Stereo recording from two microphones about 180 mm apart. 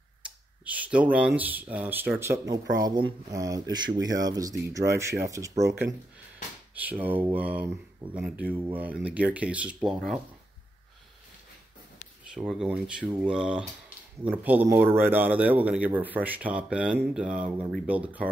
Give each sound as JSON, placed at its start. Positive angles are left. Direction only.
{"t": 0.7, "sound": "speech", "side_deg": -10}
{"t": 12.3, "sound": "speech", "side_deg": 0}